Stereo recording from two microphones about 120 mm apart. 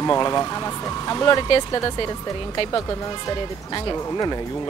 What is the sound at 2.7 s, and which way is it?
Speech, 25° left (ahead or behind).